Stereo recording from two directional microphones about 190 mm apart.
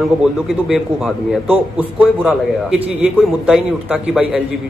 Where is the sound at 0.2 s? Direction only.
5° right (ahead or behind).